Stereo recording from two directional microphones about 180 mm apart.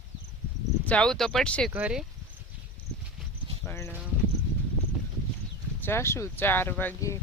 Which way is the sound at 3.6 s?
15° left (ahead or behind).